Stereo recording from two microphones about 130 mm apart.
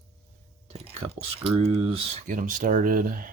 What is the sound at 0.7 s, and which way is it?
Whispering, 50° right (ahead or behind).